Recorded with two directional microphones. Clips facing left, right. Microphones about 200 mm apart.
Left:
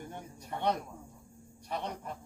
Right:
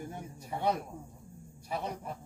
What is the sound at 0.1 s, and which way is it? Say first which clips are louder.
A man's voice: right 1 dB; 5° right (ahead or behind).